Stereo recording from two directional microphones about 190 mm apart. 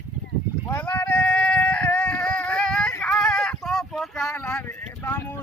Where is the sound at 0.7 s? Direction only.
15° left (ahead or behind).